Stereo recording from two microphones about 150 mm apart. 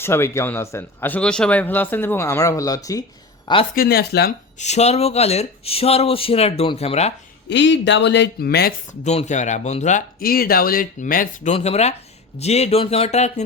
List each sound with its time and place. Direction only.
0.0 s speech: 15° left (ahead or behind)
3.4 s speech: 35° left (ahead or behind)
3.8 s speech: 90° left
4.5 s speech: 50° left (ahead or behind)
8.4 s speech: 90° left
9.0 s speech: 50° left (ahead or behind)
10.2 s speech: 80° left; by 11.5 s 60° left (ahead or behind)
11.5 s speech: 45° left (ahead or behind)